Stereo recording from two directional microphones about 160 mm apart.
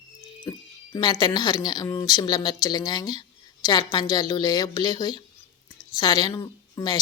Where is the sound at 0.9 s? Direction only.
25° left (ahead or behind).